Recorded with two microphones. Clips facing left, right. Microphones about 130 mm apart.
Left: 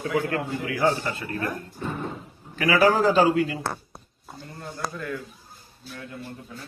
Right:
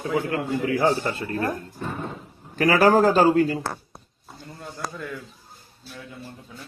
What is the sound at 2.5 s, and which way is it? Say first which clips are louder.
A man's voice: right 3 dB; 45° right (ahead or behind).